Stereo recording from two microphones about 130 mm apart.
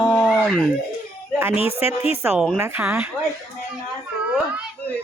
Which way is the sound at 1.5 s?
45° left (ahead or behind).